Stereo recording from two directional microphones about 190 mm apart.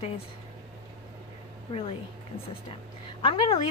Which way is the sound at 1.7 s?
30° left (ahead or behind).